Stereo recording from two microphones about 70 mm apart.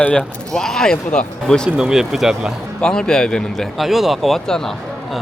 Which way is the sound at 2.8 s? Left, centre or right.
Centre.